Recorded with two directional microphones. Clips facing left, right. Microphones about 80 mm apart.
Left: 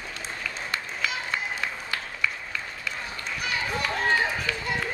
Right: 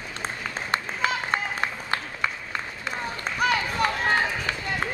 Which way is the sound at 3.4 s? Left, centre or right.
Right.